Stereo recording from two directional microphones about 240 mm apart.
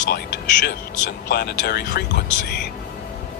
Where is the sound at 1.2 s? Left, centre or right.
Left.